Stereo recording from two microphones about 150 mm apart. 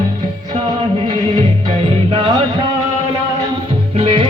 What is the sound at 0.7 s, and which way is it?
Music, 30° right (ahead or behind).